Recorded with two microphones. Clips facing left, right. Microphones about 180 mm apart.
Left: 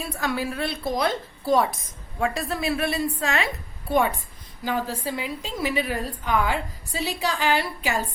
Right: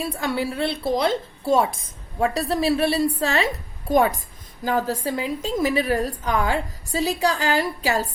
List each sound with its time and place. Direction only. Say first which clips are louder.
0.0 s a woman's voice: right 3 dB; 30° right (ahead or behind)